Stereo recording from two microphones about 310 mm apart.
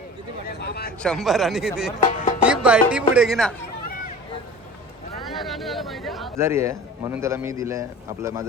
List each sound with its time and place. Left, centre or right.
0.4 s speech: left
0.9 s speech: centre
2.0 s music: left
2.5 s speech: centre
5.2 s a man's voice: centre